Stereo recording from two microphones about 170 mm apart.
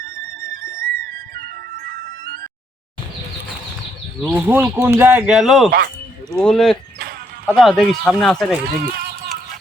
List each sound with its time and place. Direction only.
0.0 s flute: 55° right (ahead or behind)
4.3 s speech: 10° right (ahead or behind)
8.6 s speech: 65° right (ahead or behind)